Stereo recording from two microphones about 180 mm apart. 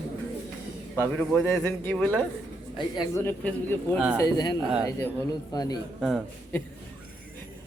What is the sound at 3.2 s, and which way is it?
A man's voice, 10° left (ahead or behind).